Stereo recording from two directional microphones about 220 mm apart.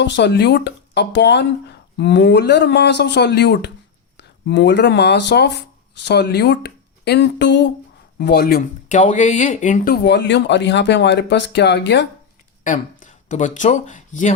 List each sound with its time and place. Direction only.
0.0 s speech: 50° left (ahead or behind)
12.6 s speech: 35° left (ahead or behind)